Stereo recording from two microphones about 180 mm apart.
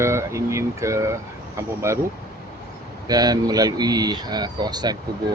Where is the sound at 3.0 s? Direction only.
20° right (ahead or behind).